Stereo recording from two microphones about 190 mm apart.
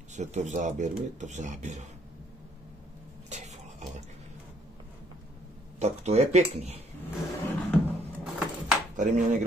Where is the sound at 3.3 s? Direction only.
40° right (ahead or behind).